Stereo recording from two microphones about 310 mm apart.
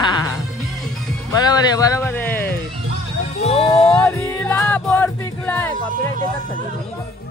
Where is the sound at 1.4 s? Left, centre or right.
Centre.